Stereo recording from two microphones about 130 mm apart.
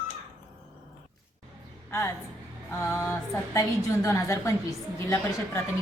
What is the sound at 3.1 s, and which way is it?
A woman's voice, 25° left (ahead or behind).